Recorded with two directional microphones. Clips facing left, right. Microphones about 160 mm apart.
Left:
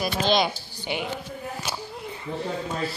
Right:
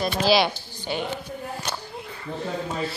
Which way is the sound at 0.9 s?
20° left (ahead or behind).